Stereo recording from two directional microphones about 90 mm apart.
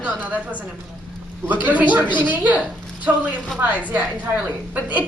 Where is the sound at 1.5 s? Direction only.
20° right (ahead or behind).